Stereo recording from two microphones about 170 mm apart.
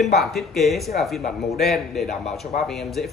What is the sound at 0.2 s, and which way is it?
A man's voice, centre (ahead or behind).